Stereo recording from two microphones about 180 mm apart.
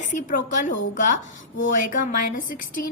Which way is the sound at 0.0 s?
45° left (ahead or behind).